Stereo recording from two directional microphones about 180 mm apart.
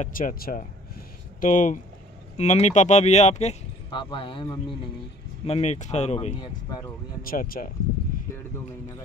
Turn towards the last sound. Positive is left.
turn(degrees=55)  # may be behind; listen again after turning